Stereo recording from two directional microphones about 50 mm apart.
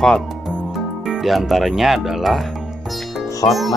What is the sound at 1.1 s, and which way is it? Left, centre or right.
Speech, centre.